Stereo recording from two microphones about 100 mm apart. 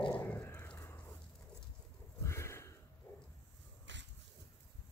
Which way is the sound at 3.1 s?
25° left (ahead or behind).